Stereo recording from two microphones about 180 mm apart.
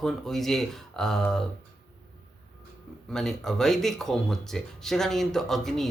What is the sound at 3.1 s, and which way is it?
Speech, centre (ahead or behind).